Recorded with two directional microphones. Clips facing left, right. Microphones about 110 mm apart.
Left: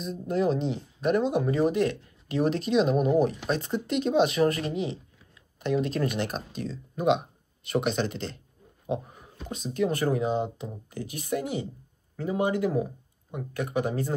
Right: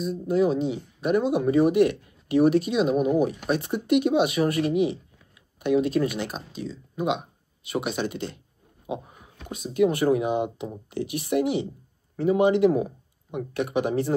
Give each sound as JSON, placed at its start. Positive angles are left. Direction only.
{"t": 0.3, "sound": "speech", "side_deg": -5}